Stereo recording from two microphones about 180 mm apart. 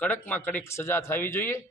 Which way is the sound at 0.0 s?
10° left (ahead or behind).